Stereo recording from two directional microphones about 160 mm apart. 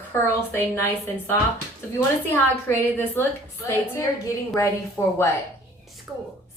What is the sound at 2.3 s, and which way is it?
Speech, 15° left (ahead or behind).